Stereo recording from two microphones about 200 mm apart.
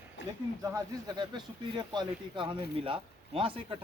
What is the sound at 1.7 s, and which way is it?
Speech, 20° right (ahead or behind).